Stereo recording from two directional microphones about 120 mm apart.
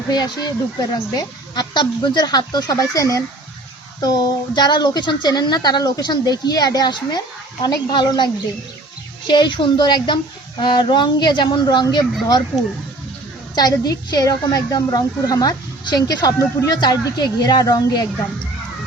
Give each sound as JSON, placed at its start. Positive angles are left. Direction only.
{"t": 0.1, "sound": "a woman's voice", "side_deg": 35}
{"t": 13.6, "sound": "a woman's voice", "side_deg": 35}